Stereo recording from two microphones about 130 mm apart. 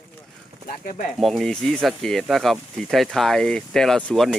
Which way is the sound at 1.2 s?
Centre (ahead or behind).